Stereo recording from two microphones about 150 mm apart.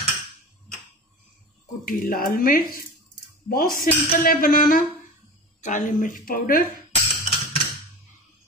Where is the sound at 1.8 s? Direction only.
70° left (ahead or behind).